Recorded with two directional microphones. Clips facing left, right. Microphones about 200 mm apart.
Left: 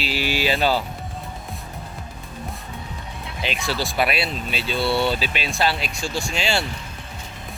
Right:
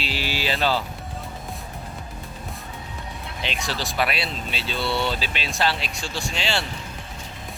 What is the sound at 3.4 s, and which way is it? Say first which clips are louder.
Speech: left 4 dB; 10° left (ahead or behind).